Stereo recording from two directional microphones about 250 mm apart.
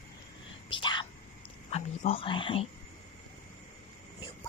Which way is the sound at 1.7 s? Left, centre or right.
Left.